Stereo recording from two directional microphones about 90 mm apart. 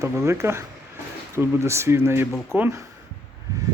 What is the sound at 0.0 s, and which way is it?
Speech, 35° right (ahead or behind).